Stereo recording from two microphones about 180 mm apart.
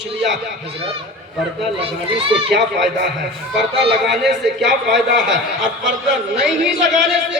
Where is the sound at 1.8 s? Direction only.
30° right (ahead or behind).